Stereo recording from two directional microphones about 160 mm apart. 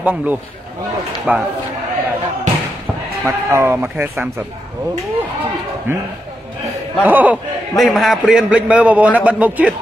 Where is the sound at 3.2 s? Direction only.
15° right (ahead or behind).